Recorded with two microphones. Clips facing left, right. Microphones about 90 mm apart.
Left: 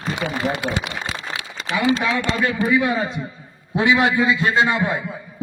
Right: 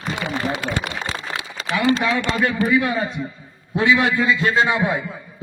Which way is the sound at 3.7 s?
20° left (ahead or behind).